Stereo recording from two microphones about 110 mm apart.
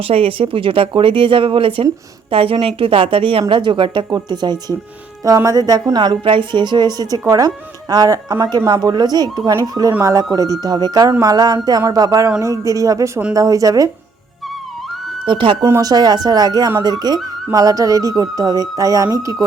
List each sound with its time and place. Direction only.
0.0 s a woman's voice: 60° right (ahead or behind); by 6.1 s 35° right (ahead or behind)
6.2 s a woman's voice: 45° right (ahead or behind); by 13.9 s 30° right (ahead or behind)
15.3 s speech: 50° right (ahead or behind)
15.6 s a woman's voice: 30° right (ahead or behind)